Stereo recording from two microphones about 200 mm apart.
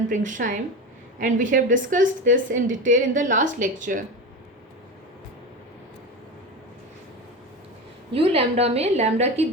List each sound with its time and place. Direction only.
0.1 s a woman's voice: 40° right (ahead or behind)
8.1 s a woman's voice: 30° right (ahead or behind)